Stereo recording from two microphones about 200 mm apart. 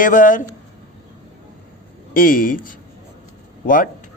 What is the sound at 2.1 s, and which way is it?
Speech, 45° left (ahead or behind).